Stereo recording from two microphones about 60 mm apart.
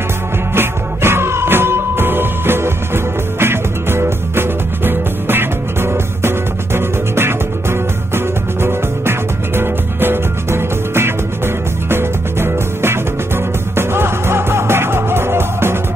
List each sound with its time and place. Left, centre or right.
0.6 s music: right